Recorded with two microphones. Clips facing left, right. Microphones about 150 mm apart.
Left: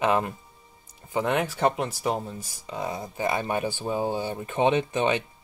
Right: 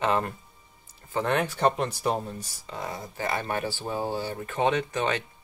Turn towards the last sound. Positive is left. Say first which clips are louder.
# left 3 dB
turn(degrees=20)  # may be behind; listen again after turning